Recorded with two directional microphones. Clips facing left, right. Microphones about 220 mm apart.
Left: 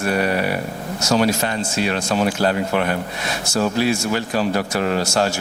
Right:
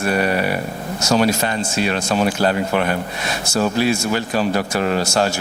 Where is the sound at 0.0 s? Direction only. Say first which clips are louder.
Right 1 dB; 15° right (ahead or behind).